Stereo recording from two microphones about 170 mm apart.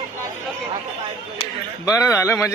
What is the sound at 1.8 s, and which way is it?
Speech, 20° left (ahead or behind).